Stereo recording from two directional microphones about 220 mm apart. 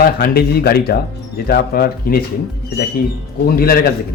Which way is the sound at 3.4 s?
40° left (ahead or behind).